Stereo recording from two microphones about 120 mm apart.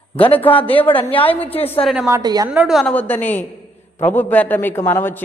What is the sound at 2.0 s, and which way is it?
Speech, 30° right (ahead or behind).